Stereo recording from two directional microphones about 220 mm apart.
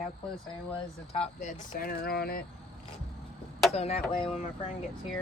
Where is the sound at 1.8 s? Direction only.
45° left (ahead or behind).